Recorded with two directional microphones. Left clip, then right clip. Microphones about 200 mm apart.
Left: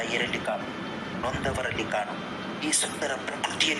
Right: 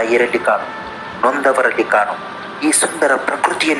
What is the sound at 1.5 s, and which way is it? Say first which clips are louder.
A man's voice: right 15 dB; 45° right (ahead or behind).